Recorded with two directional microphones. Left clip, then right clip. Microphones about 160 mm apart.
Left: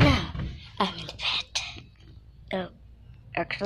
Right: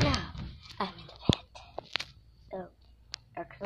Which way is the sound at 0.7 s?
25° left (ahead or behind).